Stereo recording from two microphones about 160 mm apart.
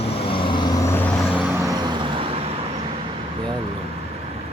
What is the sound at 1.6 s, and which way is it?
Vehicle, 25° right (ahead or behind).